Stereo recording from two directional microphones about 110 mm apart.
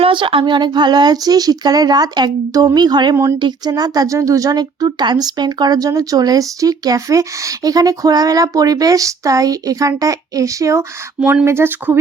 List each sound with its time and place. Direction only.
0.0 s speech: 50° right (ahead or behind); by 11.9 s 20° right (ahead or behind)